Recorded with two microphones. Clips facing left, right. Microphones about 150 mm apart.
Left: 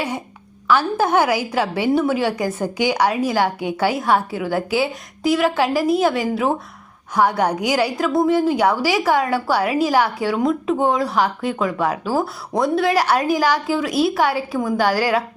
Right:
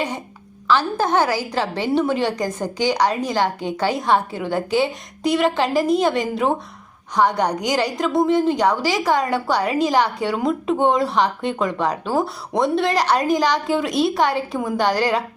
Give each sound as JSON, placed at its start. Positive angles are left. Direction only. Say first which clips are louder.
{"t": 0.7, "sound": "a woman's voice", "louder": "left 1 dB", "side_deg": 10}